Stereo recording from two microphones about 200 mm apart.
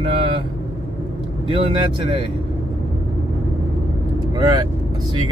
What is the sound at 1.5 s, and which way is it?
Speech, 25° right (ahead or behind).